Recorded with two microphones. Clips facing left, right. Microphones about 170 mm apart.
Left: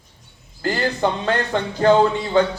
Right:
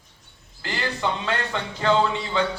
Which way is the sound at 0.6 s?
45° left (ahead or behind).